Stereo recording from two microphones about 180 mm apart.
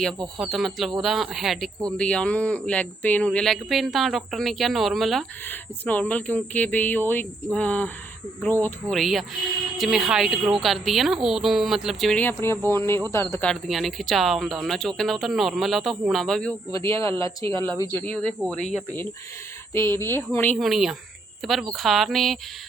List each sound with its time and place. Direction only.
0.3 s speech: 5° right (ahead or behind); by 13.5 s 15° left (ahead or behind)
13.5 s speech: centre (ahead or behind)
17.0 s speech: 20° left (ahead or behind); by 18.6 s centre (ahead or behind)
19.7 s speech: 15° left (ahead or behind)
20.6 s speech: centre (ahead or behind)